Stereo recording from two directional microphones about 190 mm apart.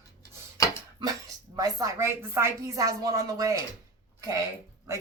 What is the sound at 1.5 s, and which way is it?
Speech, 20° right (ahead or behind).